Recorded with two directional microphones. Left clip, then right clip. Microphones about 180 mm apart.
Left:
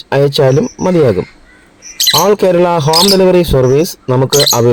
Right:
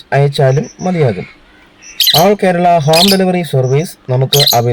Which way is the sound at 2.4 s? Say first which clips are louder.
Even; 35° left (ahead or behind).